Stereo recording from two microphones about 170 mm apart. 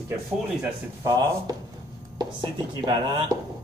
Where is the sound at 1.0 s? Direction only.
20° right (ahead or behind).